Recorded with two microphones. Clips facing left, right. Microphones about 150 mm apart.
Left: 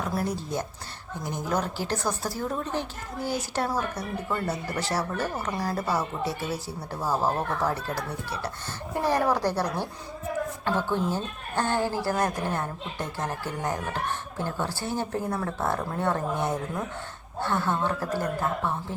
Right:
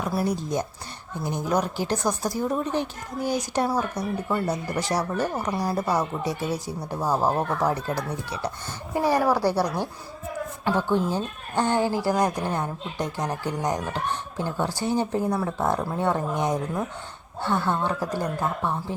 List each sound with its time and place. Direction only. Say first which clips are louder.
0.1 s a woman's voice: right 4 dB; 15° right (ahead or behind)